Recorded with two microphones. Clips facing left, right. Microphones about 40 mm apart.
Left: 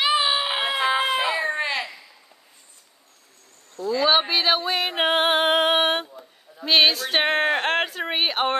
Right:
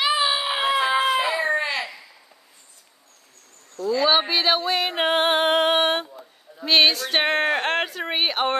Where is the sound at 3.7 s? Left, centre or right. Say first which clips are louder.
Even; centre.